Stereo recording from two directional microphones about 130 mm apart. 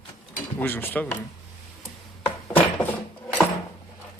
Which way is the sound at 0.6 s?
15° left (ahead or behind).